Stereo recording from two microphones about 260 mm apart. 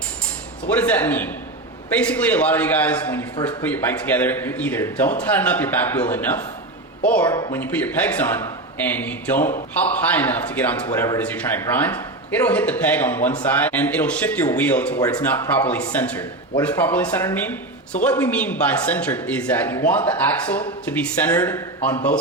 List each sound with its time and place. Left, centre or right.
0.7 s a man's voice: centre
7.3 s a man's voice: centre
7.6 s a man's voice: centre